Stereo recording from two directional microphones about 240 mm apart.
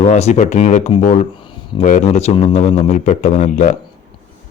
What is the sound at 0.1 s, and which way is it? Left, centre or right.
Speech, left.